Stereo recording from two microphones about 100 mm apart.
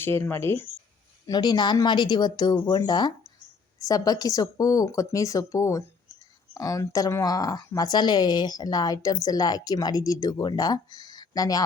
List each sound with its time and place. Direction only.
0.0 s speech: 25° left (ahead or behind)
1.3 s a woman's voice: 45° left (ahead or behind)